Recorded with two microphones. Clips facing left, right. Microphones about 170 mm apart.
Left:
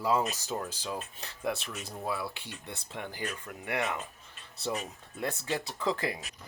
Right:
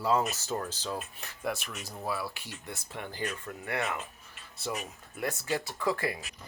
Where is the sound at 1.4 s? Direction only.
25° left (ahead or behind).